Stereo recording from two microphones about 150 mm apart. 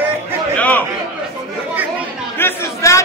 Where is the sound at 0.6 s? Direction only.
10° left (ahead or behind).